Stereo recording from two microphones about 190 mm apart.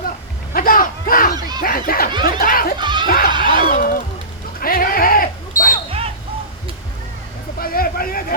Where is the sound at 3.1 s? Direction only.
50° left (ahead or behind).